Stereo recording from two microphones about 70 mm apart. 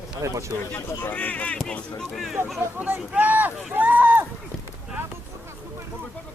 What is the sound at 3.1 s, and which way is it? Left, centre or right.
Speech, right.